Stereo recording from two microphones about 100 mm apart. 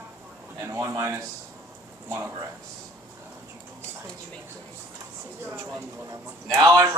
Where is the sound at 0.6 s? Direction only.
30° right (ahead or behind).